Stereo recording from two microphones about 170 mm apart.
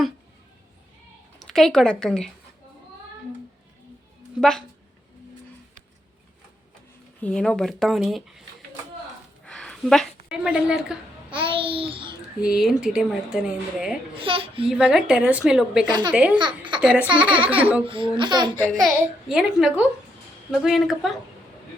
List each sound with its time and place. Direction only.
1.4 s a woman's voice: centre (ahead or behind)
4.4 s a woman's voice: 5° left (ahead or behind)
7.2 s speech: 5° left (ahead or behind)
9.4 s a sound: 5° left (ahead or behind)
11.3 s babbling: 30° right (ahead or behind)
12.4 s speech: 5° right (ahead or behind)
14.1 s a child's voice: 30° right (ahead or behind)
14.7 s speech: 5° right (ahead or behind)
15.9 s speech: 25° right (ahead or behind)
16.1 s speech: 5° right (ahead or behind)
16.4 s a sound: 30° right (ahead or behind)
16.8 s speech: 5° right (ahead or behind)
17.8 s speech: 30° right (ahead or behind)
18.7 s speech: centre (ahead or behind)